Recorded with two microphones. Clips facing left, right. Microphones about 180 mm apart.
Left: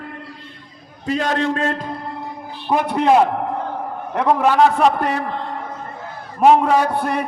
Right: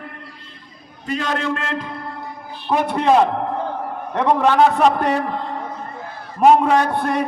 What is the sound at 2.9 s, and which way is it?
A man's voice, 5° left (ahead or behind).